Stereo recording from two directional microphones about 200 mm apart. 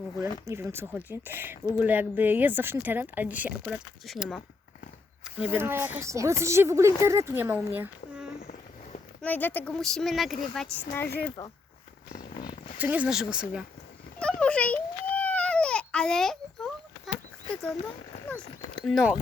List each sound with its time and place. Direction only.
0.2 s speech: 15° right (ahead or behind)
9.2 s speech: 10° left (ahead or behind)
11.0 s speech: 50° left (ahead or behind)
12.8 s speech: 5° right (ahead or behind)
14.2 s baby cry: 5° left (ahead or behind)
18.8 s speech: centre (ahead or behind)